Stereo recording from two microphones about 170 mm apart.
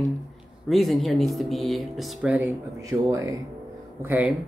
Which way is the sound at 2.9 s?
20° right (ahead or behind).